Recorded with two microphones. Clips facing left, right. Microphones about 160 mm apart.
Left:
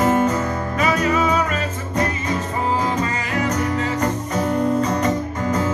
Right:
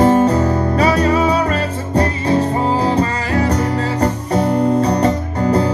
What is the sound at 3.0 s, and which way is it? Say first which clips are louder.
Music: right 6 dB; 35° right (ahead or behind).